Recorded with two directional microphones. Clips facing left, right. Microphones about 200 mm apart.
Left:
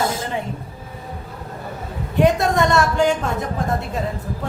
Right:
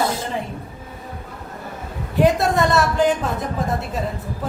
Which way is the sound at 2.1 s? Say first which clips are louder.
Even; centre (ahead or behind).